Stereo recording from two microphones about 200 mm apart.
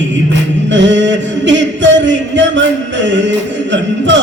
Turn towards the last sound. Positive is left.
turn(degrees=-65)  # may be behind; listen again after turning